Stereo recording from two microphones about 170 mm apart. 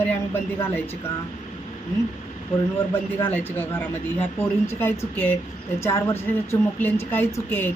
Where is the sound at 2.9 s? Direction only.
10° left (ahead or behind).